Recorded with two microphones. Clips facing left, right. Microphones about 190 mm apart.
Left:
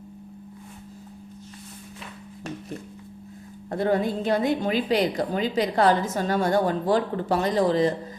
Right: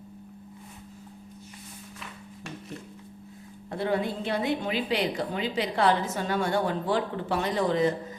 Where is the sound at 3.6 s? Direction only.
45° left (ahead or behind).